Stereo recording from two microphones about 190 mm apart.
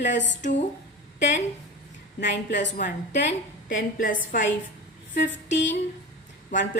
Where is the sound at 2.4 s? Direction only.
65° left (ahead or behind).